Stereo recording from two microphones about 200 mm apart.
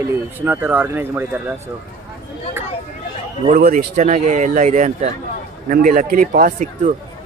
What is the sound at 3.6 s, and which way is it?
Speech, 50° right (ahead or behind).